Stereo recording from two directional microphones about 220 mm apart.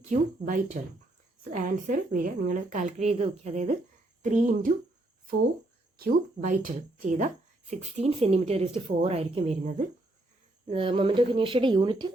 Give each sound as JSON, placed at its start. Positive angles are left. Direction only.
{"t": 0.1, "sound": "speech", "side_deg": -35}
{"t": 6.0, "sound": "a woman's voice", "side_deg": -40}